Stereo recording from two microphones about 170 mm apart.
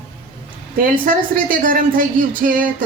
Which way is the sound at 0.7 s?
55° right (ahead or behind).